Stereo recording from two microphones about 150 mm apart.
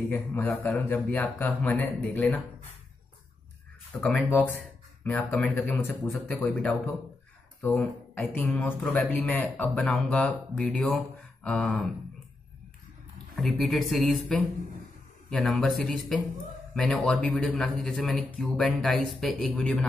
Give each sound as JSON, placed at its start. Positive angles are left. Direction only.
{"t": 0.1, "sound": "speech", "side_deg": 15}
{"t": 3.9, "sound": "speech", "side_deg": 5}
{"t": 13.4, "sound": "speech", "side_deg": 0}